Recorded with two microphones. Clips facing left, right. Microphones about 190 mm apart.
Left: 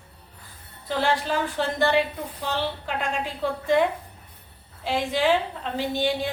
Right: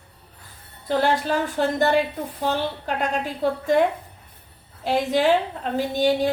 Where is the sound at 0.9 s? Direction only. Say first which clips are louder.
Right 3 dB; 45° right (ahead or behind).